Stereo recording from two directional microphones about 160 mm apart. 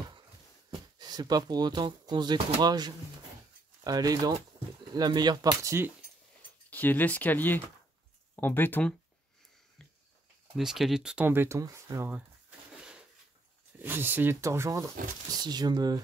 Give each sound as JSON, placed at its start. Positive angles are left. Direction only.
{"t": 0.7, "sound": "speech", "side_deg": -25}
{"t": 6.7, "sound": "speech", "side_deg": 10}
{"t": 10.6, "sound": "speech", "side_deg": 0}